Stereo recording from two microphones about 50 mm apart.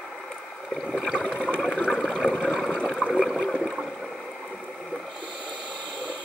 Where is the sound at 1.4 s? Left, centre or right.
Left.